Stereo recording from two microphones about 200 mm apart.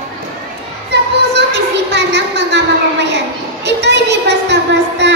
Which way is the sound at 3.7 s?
60° right (ahead or behind).